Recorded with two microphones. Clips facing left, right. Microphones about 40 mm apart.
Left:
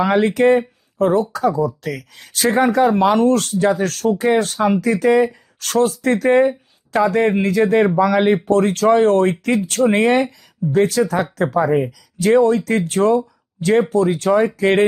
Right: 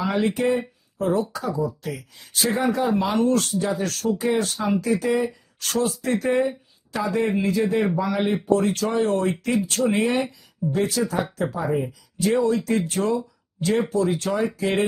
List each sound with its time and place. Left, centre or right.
0.0 s speech: left